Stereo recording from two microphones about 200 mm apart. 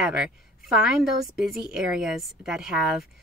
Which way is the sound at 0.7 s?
5° right (ahead or behind).